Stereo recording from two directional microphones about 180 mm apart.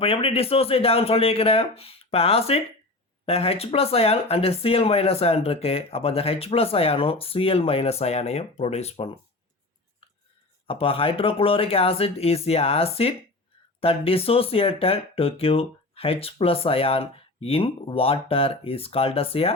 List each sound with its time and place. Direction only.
0.0 s speech: 35° left (ahead or behind)
10.7 s speech: 30° left (ahead or behind)